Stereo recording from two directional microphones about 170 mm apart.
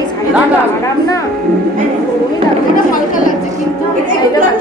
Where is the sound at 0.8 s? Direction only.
20° left (ahead or behind).